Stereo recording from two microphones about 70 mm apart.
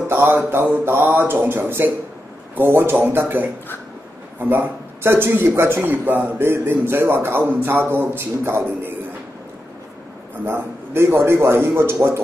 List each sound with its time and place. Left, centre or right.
0.1 s a man's voice: right
10.4 s a man's voice: right